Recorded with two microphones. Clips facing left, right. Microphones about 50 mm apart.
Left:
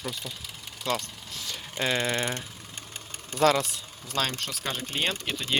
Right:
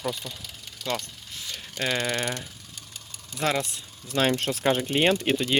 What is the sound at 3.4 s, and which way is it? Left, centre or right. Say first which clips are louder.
Speech: left 4 dB; right.